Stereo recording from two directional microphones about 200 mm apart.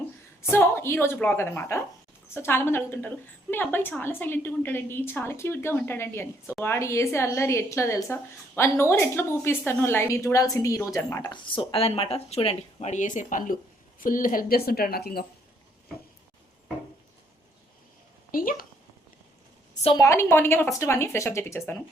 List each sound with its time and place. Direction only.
0.5 s a woman's voice: 10° left (ahead or behind); by 15.3 s 50° left (ahead or behind)
18.3 s a woman's voice: 45° left (ahead or behind)
19.8 s a woman's voice: 20° left (ahead or behind)